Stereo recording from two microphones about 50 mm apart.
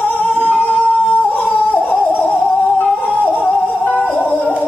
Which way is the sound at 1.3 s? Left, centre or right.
Left.